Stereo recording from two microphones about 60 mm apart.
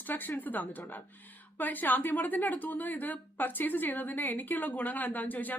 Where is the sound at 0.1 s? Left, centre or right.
Left.